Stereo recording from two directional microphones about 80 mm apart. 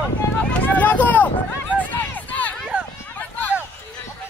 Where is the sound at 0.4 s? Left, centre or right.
Centre.